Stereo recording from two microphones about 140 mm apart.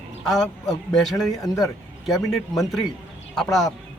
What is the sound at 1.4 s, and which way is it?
Speech, 25° left (ahead or behind).